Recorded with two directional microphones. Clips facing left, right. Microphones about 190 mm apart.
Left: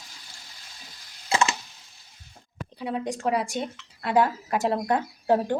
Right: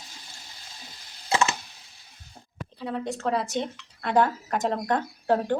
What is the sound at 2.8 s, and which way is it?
Speech, 10° left (ahead or behind).